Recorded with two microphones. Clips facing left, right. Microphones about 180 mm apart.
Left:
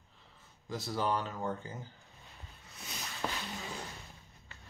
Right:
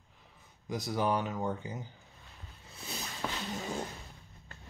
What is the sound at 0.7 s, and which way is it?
Speech, 15° right (ahead or behind).